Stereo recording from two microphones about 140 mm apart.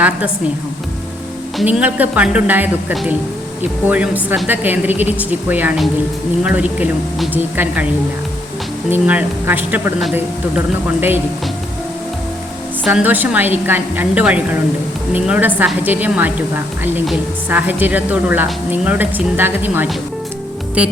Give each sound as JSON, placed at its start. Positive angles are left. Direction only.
{"t": 1.6, "sound": "a woman's voice", "side_deg": -10}
{"t": 8.9, "sound": "a woman's voice", "side_deg": -10}
{"t": 12.8, "sound": "a woman's voice", "side_deg": -10}
{"t": 17.5, "sound": "a woman's voice", "side_deg": -15}